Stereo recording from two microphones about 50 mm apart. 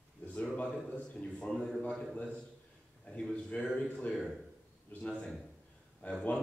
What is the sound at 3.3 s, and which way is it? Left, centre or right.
Speech, left.